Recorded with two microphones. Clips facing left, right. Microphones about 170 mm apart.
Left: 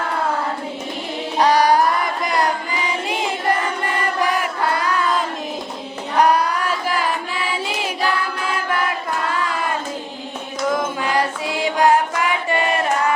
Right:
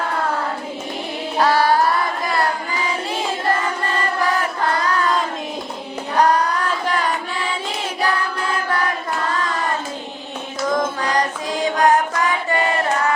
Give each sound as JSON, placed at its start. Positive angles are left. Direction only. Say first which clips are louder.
{"t": 1.4, "sound": "music", "louder": "left 1 dB", "side_deg": 15}
{"t": 2.2, "sound": "choir", "louder": "left 3 dB", "side_deg": 15}
{"t": 6.1, "sound": "a sound", "louder": "even", "side_deg": 10}
{"t": 11.0, "sound": "music", "louder": "even", "side_deg": 5}